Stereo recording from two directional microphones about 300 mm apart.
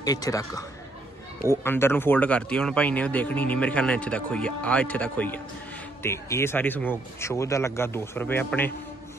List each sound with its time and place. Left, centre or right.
0.0 s a man's voice: centre